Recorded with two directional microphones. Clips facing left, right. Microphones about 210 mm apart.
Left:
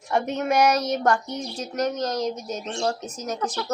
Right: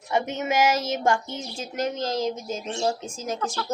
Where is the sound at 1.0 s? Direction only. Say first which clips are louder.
Left 1 dB; 25° right (ahead or behind).